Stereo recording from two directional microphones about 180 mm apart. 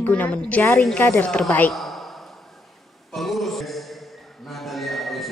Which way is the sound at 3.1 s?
Centre (ahead or behind).